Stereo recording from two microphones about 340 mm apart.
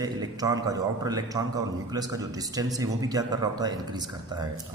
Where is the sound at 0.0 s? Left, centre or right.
Centre.